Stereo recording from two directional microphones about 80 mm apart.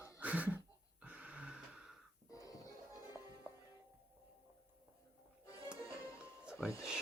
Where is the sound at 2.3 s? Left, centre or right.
Left.